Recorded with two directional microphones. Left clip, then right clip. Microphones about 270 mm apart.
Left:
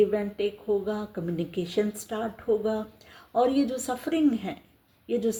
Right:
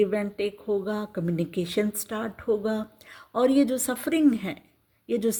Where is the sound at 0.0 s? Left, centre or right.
Right.